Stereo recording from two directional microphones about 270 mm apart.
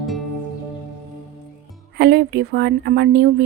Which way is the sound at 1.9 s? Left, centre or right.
Right.